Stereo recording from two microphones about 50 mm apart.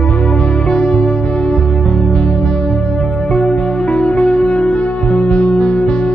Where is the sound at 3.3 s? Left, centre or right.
Centre.